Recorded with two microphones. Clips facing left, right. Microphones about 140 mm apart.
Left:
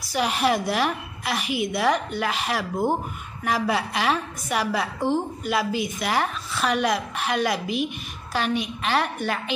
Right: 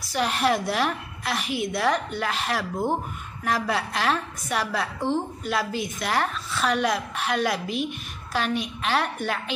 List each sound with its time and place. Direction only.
0.0 s a woman's voice: 5° left (ahead or behind)